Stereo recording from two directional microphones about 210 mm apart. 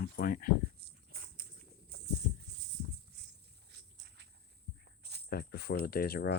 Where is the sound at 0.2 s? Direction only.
40° left (ahead or behind).